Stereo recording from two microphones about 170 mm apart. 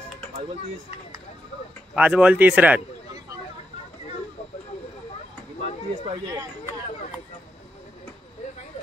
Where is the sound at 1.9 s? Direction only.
5° right (ahead or behind).